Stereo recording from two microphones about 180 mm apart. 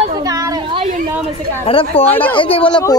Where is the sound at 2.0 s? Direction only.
10° left (ahead or behind).